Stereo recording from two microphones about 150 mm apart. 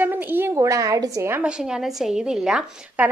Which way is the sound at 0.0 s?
15° right (ahead or behind).